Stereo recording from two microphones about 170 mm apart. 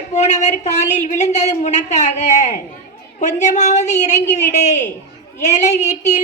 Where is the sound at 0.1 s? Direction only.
40° left (ahead or behind).